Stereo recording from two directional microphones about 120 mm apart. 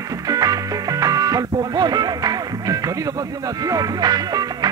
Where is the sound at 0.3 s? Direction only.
30° right (ahead or behind).